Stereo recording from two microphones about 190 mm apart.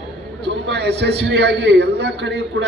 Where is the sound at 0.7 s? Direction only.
60° right (ahead or behind).